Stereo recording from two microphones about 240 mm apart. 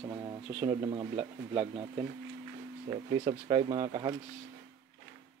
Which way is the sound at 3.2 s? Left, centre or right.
Centre.